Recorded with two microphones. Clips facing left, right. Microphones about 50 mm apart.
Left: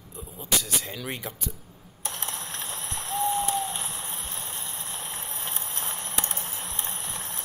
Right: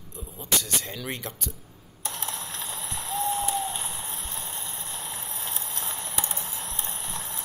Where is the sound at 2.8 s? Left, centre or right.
Left.